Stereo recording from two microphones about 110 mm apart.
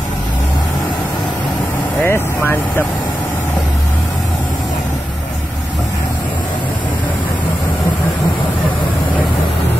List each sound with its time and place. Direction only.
2.0 s speech: 20° left (ahead or behind)